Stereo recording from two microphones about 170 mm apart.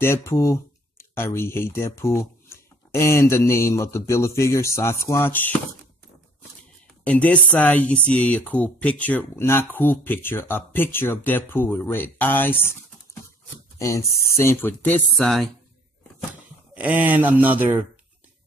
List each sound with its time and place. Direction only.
0.0 s speech: 15° left (ahead or behind)
7.1 s speech: 10° left (ahead or behind)
13.7 s speech: 15° left (ahead or behind); by 15.5 s centre (ahead or behind)
16.7 s speech: 10° right (ahead or behind)